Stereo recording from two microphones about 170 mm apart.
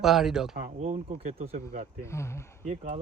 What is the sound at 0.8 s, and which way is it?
Speech, 40° right (ahead or behind).